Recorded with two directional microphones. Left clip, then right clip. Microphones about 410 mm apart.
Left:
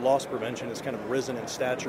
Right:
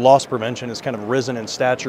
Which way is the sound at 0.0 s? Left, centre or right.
Right.